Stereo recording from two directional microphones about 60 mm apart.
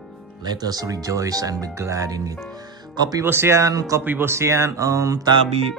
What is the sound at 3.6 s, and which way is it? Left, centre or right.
Speech, right.